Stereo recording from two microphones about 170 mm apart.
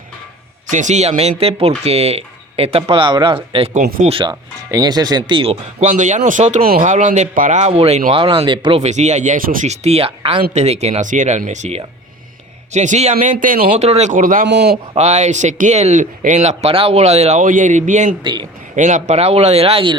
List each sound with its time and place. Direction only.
0.7 s speech: 45° right (ahead or behind)
3.8 s speech: 55° right (ahead or behind)
4.0 s speech: 30° right (ahead or behind)
5.3 s speech: 35° right (ahead or behind)
8.8 s speech: 40° right (ahead or behind)
13.8 s speech: 40° right (ahead or behind)
14.4 s speech: 80° right
14.9 s speech: 45° right (ahead or behind)
18.2 s speech: 25° right (ahead or behind)
18.8 s speech: 45° right (ahead or behind)